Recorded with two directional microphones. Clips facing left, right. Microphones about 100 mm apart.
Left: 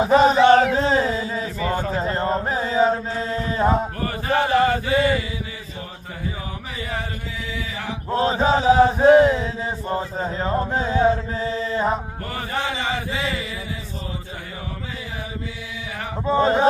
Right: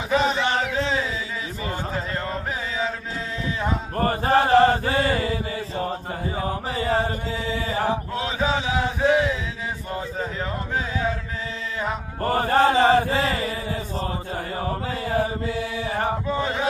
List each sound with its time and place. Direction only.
0.0 s a sound: 40° left (ahead or behind)
4.0 s chant: 40° right (ahead or behind)
6.8 s mantra: 35° right (ahead or behind)
8.1 s chant: 40° left (ahead or behind)
12.3 s chant: 45° right (ahead or behind)
16.3 s a sound: 30° left (ahead or behind)